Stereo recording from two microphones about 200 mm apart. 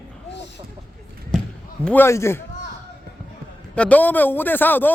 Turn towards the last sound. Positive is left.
turn(degrees=10)  # may be behind; listen again after turning